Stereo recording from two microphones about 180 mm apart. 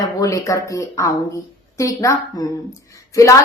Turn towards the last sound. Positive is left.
turn(degrees=15)  # may be behind; listen again after turning